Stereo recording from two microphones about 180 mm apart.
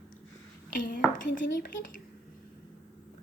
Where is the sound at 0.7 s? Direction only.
45° left (ahead or behind).